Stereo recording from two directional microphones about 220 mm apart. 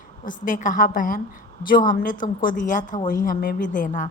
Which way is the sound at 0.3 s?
35° left (ahead or behind).